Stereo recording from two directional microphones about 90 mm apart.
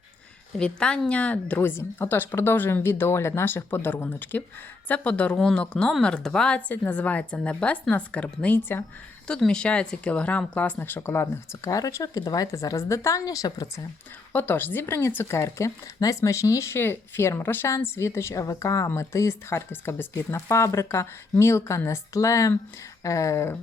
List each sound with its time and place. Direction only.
0.6 s a woman's voice: 10° left (ahead or behind)
6.7 s a woman's voice: 20° left (ahead or behind)
9.2 s speech: 10° left (ahead or behind); by 13.8 s 40° left (ahead or behind)
14.3 s speech: 20° left (ahead or behind)